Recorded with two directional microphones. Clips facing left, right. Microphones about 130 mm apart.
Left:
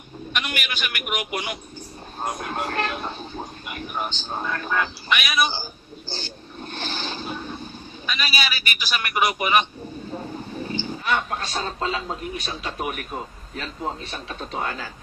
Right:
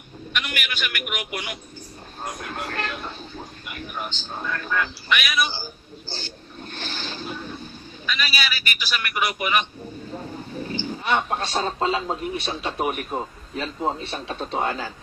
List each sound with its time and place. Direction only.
0.3 s a man's voice: 20° left (ahead or behind)
11.1 s a man's voice: 30° right (ahead or behind)